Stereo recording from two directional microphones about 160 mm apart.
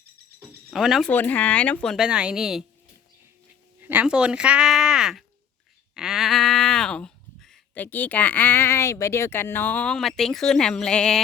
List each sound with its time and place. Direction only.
0.7 s speech: centre (ahead or behind)
1.1 s speech: 10° left (ahead or behind)
3.8 s speech: 10° right (ahead or behind); by 11.2 s 5° left (ahead or behind)